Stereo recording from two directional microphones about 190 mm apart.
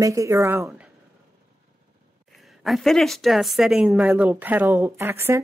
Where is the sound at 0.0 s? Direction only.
15° right (ahead or behind).